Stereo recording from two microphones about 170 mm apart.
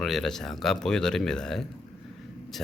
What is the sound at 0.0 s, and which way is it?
Speech, centre (ahead or behind).